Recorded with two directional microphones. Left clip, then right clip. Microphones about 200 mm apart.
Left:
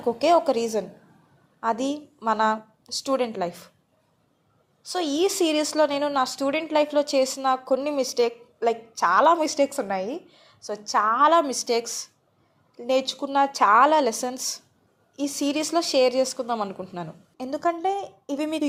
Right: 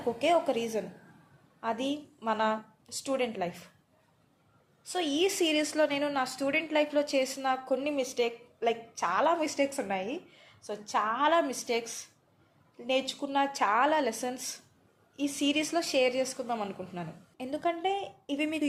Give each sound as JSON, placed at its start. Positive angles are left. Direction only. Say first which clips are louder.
{"t": 0.2, "sound": "a woman's voice", "louder": "left 7 dB", "side_deg": 35}
{"t": 4.9, "sound": "a woman's voice", "louder": "left 5 dB", "side_deg": 30}